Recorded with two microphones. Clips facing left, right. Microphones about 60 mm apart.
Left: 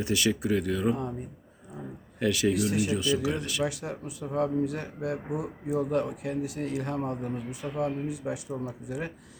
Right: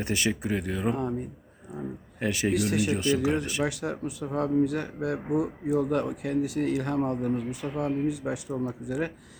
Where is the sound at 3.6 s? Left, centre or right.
Right.